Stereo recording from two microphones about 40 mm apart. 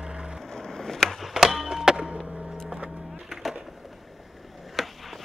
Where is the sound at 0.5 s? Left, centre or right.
Centre.